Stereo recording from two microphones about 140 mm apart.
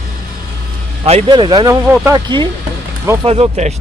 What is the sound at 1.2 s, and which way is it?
Speech, 35° right (ahead or behind).